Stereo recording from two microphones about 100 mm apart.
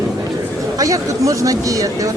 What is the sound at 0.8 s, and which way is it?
Speech, 35° right (ahead or behind).